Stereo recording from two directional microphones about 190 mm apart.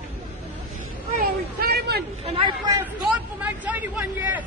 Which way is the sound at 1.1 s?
50° right (ahead or behind).